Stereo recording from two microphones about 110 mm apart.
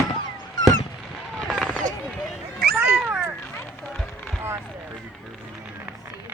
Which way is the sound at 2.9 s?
5° right (ahead or behind).